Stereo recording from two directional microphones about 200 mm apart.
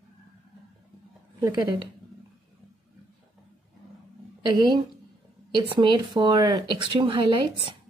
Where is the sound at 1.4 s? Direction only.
20° right (ahead or behind).